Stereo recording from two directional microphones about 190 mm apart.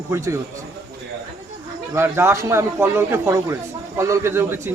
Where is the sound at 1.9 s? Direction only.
15° right (ahead or behind).